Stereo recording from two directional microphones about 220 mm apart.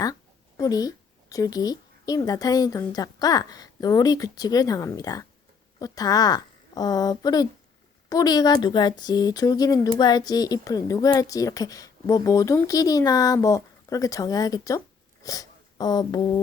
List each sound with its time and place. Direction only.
0.0 s speech: 15° left (ahead or behind)